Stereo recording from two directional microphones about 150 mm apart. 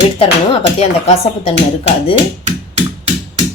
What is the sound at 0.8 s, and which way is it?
Speech, 45° left (ahead or behind).